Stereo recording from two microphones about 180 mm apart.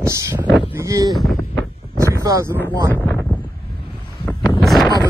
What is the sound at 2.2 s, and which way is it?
Speech, 20° right (ahead or behind).